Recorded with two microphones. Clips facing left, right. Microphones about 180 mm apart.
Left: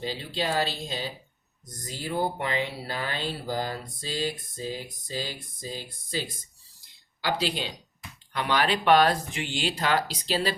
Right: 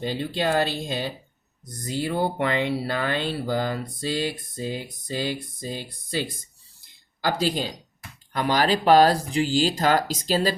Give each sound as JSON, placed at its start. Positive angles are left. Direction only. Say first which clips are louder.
{"t": 0.0, "sound": "speech", "louder": "right 5 dB", "side_deg": -55}
{"t": 6.8, "sound": "a sound", "louder": "right 4 dB", "side_deg": -45}
{"t": 8.3, "sound": "speech", "louder": "right 4 dB", "side_deg": -40}